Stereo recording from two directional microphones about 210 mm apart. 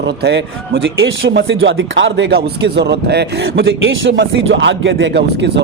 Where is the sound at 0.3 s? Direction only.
55° right (ahead or behind).